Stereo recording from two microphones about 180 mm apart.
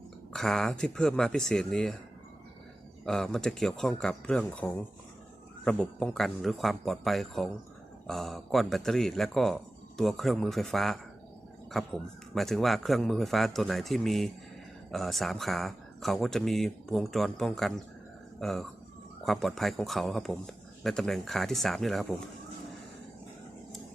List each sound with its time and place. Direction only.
0.3 s speech: centre (ahead or behind)
3.1 s speech: 5° left (ahead or behind)
12.3 s speech: centre (ahead or behind)